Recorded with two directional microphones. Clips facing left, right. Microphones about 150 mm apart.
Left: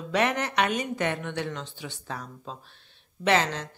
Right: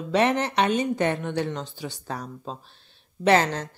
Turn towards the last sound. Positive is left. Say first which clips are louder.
# right 4 dB
turn(degrees=-45)  # may be behind; listen again after turning